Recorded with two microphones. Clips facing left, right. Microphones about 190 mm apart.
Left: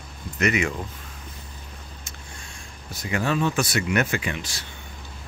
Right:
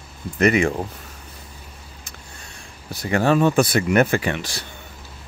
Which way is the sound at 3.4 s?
60° right (ahead or behind).